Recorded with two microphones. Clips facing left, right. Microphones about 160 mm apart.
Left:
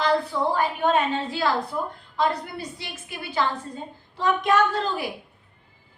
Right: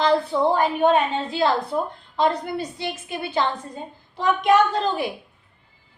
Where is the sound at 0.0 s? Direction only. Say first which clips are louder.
Right 4 dB; 25° right (ahead or behind).